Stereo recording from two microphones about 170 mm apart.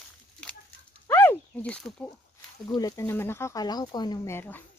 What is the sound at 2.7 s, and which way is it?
Speech, 20° left (ahead or behind).